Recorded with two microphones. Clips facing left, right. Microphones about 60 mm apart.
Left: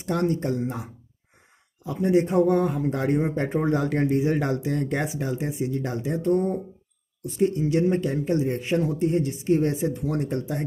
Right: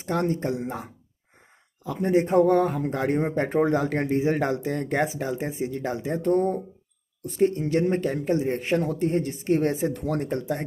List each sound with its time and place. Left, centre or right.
0.0 s speech: right
1.9 s speech: right